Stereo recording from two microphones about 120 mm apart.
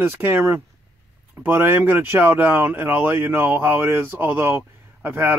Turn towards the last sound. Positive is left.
turn(degrees=-15)  # may be behind; listen again after turning